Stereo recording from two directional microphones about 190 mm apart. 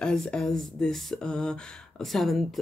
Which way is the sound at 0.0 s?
5° left (ahead or behind).